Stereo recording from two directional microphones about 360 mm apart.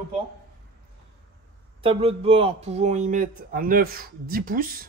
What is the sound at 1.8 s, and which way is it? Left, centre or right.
Speech, centre.